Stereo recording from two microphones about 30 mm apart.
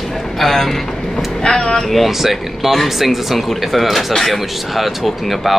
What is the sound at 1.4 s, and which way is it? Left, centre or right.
Speech, left.